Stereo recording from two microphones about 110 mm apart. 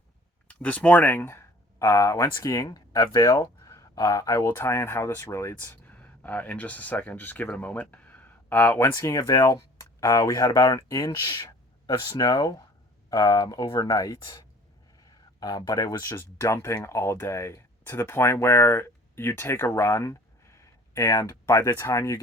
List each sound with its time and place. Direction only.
0.4 s speech: 10° left (ahead or behind)
9.0 s speech: 30° left (ahead or behind)